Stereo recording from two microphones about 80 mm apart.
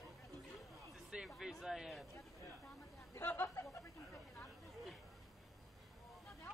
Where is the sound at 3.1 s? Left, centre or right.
Left.